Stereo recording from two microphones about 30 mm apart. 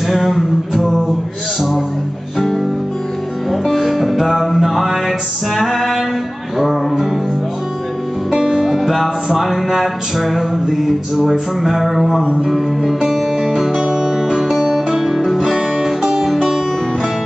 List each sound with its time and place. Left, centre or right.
0.1 s a sound: centre
3.6 s music: centre
4.6 s mantra: centre
5.6 s female singing: centre
6.6 s music: centre
8.4 s music: centre
9.8 s mantra: centre
13.0 s music: centre
13.8 s music: right
15.0 s music: centre